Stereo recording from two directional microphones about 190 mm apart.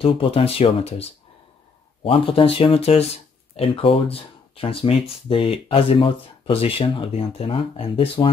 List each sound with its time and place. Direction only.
0.0 s speech: 30° left (ahead or behind)
2.0 s speech: 30° left (ahead or behind)